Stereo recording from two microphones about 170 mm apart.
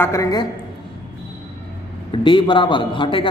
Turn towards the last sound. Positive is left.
turn(degrees=30)  # may be behind; listen again after turning